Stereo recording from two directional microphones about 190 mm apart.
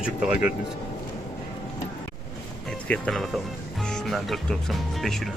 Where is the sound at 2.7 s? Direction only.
5° left (ahead or behind).